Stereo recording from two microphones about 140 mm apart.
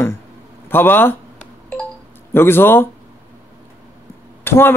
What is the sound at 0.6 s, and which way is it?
Telephone dialing, 15° left (ahead or behind).